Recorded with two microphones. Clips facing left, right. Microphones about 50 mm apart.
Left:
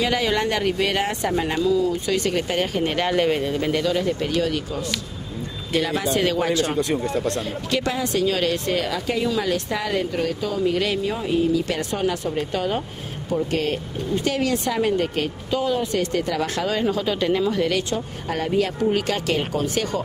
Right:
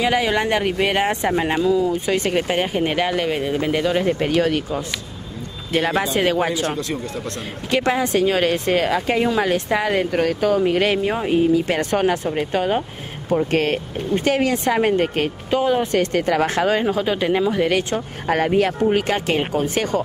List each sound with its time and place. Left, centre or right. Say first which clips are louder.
0.0 s speech: right 3 dB; centre
3.0 s speech: even; centre
3.4 s speech: right 2 dB; centre
3.9 s speech: right 4 dB; right
7.7 s speech: right 5 dB; right
10.1 s speech: right 6 dB; right
11.9 s speech: right 6 dB; right
12.4 s speech: right 4 dB; right
18.9 s speech: right 3 dB; right